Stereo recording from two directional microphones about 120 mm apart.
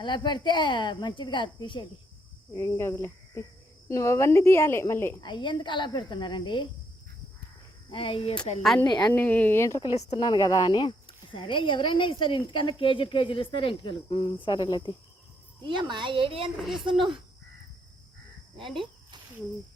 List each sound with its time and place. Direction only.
0.0 s speech: 40° left (ahead or behind)
2.6 s a woman's voice: 20° left (ahead or behind)
5.2 s speech: 40° left (ahead or behind)
7.9 s speech: 45° left (ahead or behind)
8.9 s speech: 35° left (ahead or behind)
9.1 s speech: 15° left (ahead or behind)
10.2 s speech: 35° left (ahead or behind)
15.6 s speech: 40° right (ahead or behind)
16.6 s speech: centre (ahead or behind)
18.5 s speech: centre (ahead or behind)